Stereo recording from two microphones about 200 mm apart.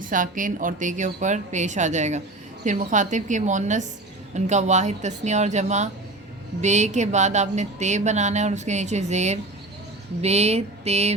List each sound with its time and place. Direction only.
0.1 s speech: 40° right (ahead or behind)